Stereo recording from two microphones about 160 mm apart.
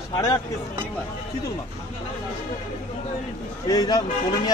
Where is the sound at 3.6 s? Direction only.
25° left (ahead or behind).